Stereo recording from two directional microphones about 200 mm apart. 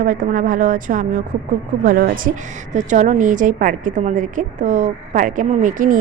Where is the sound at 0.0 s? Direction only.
40° right (ahead or behind).